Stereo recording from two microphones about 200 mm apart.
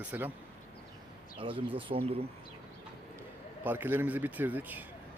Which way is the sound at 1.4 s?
25° right (ahead or behind).